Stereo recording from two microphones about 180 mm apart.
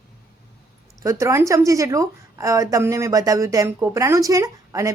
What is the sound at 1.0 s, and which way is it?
A woman's voice, 15° right (ahead or behind).